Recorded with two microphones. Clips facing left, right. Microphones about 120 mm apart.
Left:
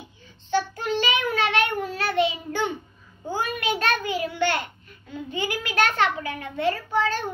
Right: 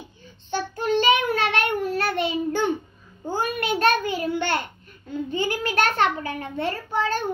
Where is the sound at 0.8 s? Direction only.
45° right (ahead or behind).